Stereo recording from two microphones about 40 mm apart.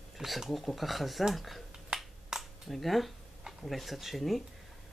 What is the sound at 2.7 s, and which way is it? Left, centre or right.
Speech, centre.